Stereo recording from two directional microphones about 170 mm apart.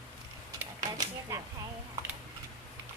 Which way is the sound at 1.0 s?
20° right (ahead or behind).